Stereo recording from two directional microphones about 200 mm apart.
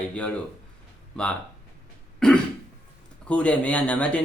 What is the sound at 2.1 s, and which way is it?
Throat clearing, 5° left (ahead or behind).